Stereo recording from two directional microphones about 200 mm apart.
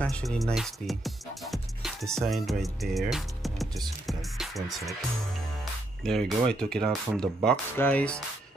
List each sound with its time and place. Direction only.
0.0 s speech: 5° left (ahead or behind)
6.0 s speech: centre (ahead or behind)